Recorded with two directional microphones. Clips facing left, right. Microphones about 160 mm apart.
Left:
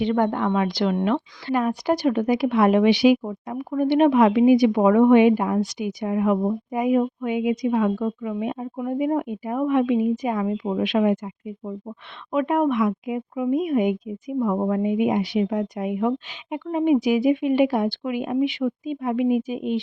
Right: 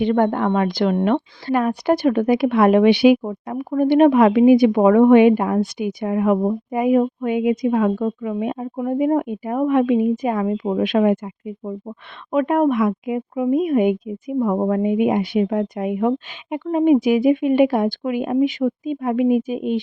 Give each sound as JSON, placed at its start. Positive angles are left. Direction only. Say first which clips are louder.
{"t": 0.0, "sound": "speech", "louder": "right 4 dB", "side_deg": -50}
{"t": 12.3, "sound": "speech", "louder": "right 4 dB", "side_deg": -50}